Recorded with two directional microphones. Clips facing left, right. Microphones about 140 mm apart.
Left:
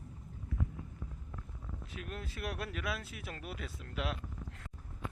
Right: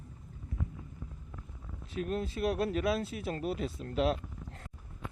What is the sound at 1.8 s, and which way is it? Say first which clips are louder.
Speech: right 12 dB; 30° right (ahead or behind).